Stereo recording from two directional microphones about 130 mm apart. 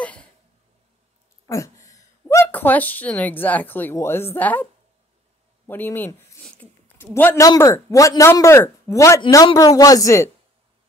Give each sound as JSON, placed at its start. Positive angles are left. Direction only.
{"t": 1.5, "sound": "a woman's voice", "side_deg": 25}
{"t": 5.7, "sound": "speech", "side_deg": 15}
{"t": 6.4, "sound": "a sound", "side_deg": 10}
{"t": 7.4, "sound": "speech", "side_deg": 25}